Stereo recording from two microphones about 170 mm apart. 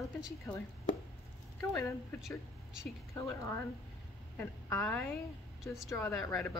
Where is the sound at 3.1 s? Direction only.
15° left (ahead or behind).